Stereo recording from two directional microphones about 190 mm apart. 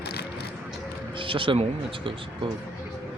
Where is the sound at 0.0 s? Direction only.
60° left (ahead or behind).